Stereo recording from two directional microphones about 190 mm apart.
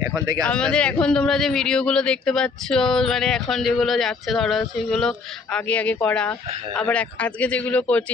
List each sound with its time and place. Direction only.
0.0 s speech: 20° right (ahead or behind)
0.5 s a man's voice: 5° left (ahead or behind)